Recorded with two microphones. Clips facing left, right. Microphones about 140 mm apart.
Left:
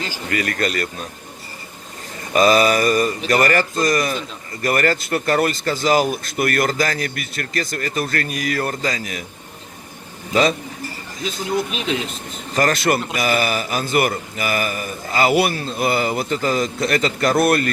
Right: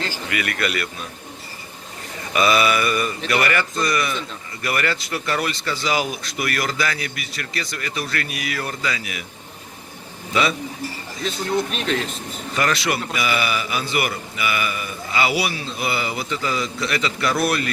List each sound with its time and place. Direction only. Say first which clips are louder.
0.3 s mantra: left 4 dB; 40° left (ahead or behind)
2.3 s mantra: left 4 dB; 40° left (ahead or behind)
3.2 s speech: left 3 dB; 40° left (ahead or behind)
10.3 s mantra: left 4 dB; 40° left (ahead or behind)
11.4 s speech: left 1 dB; centre (ahead or behind)
12.5 s speech: left 4 dB; 45° left (ahead or behind)